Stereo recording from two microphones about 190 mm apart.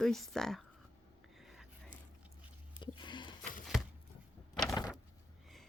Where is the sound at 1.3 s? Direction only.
Centre (ahead or behind).